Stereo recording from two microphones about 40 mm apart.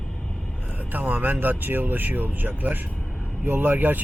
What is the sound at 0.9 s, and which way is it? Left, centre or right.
Speech, right.